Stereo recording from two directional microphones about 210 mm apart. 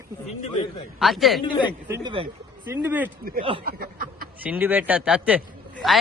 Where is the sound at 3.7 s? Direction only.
45° right (ahead or behind).